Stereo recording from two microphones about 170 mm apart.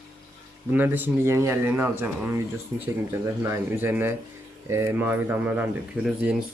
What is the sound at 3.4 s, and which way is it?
Speech, 15° right (ahead or behind).